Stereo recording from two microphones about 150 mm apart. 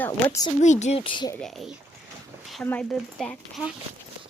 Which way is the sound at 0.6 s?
50° left (ahead or behind).